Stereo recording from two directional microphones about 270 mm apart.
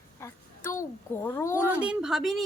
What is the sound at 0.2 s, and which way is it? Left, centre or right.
A woman's voice, centre.